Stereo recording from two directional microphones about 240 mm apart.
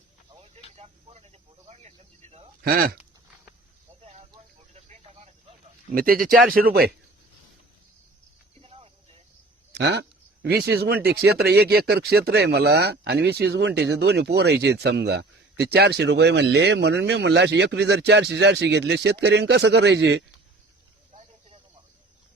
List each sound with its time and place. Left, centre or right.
0.8 s speech: right
2.6 s a man's voice: right
4.7 s a sound: right
5.9 s a man's voice: right
8.6 s a sound: right
9.7 s speech: right